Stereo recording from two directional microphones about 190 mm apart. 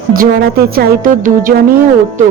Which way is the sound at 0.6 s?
50° right (ahead or behind).